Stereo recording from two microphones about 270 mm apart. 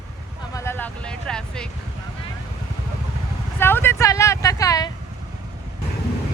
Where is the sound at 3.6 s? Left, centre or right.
Centre.